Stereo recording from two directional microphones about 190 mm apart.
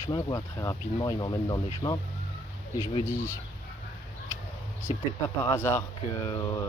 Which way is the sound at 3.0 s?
15° left (ahead or behind).